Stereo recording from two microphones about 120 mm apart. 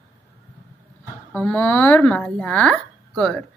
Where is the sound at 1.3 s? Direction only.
15° left (ahead or behind).